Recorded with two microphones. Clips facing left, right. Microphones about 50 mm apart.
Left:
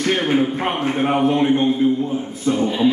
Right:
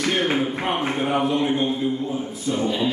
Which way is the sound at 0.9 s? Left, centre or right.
Left.